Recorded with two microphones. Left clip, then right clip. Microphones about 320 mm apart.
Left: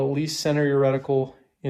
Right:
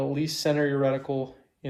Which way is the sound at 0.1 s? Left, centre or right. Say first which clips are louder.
Left 2 dB; centre.